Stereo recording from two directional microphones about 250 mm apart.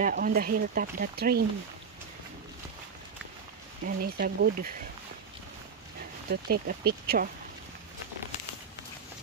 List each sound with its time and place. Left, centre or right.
0.0 s speech: right
3.8 s speech: right
6.3 s speech: right